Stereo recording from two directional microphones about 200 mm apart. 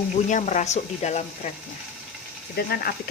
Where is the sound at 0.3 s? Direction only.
35° left (ahead or behind).